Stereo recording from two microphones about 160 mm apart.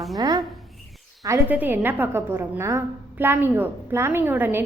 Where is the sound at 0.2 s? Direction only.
25° right (ahead or behind).